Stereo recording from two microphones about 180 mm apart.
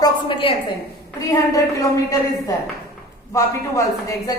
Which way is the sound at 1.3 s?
15° left (ahead or behind).